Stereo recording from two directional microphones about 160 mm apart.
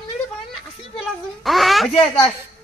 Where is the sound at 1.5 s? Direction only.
Centre (ahead or behind).